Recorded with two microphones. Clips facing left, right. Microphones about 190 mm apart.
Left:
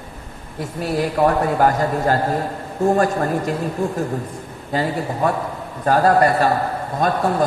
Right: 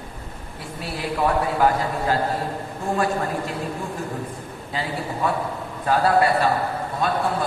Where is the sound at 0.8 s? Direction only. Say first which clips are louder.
Left 6 dB; 45° left (ahead or behind).